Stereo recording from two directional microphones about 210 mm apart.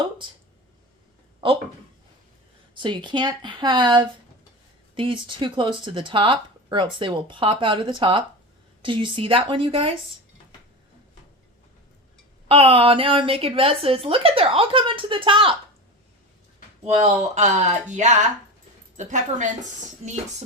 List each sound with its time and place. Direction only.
1.4 s speech: 25° right (ahead or behind)
2.7 s speech: 20° right (ahead or behind)
12.5 s speech: 25° right (ahead or behind)
17.3 s speech: 35° right (ahead or behind)